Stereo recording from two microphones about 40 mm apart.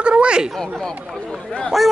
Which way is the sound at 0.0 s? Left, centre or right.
Right.